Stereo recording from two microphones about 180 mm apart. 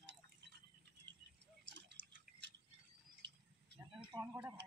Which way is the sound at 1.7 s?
85° right.